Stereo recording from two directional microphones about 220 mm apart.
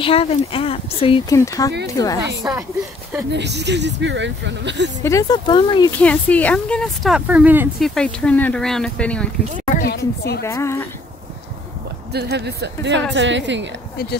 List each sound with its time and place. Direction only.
0.0 s speech: 25° left (ahead or behind)
1.3 s speech: 15° left (ahead or behind)
2.4 s speech: 10° right (ahead or behind)
3.3 s speech: 50° right (ahead or behind)
5.0 s speech: 15° left (ahead or behind)
5.9 s speech: 5° left (ahead or behind)
7.9 s speech: 5° left (ahead or behind)
9.8 s a sound: 45° left (ahead or behind)
10.4 s speech: 10° left (ahead or behind)
12.1 s a woman's voice: 50° right (ahead or behind)